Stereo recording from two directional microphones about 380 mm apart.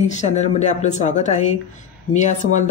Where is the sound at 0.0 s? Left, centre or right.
Centre.